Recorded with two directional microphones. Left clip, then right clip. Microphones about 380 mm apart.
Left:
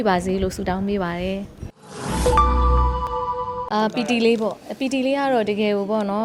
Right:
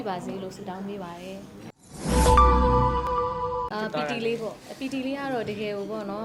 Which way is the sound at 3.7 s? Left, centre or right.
Left.